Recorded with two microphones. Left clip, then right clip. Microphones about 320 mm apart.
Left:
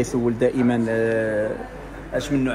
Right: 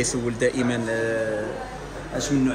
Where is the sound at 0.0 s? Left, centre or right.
Centre.